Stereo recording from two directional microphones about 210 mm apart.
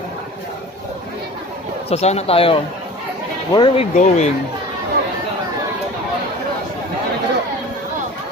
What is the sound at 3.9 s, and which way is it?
Speech, 30° left (ahead or behind).